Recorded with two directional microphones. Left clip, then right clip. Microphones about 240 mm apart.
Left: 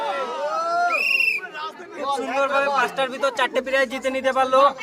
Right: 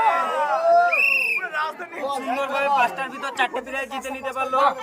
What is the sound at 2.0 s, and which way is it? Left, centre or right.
Speech, centre.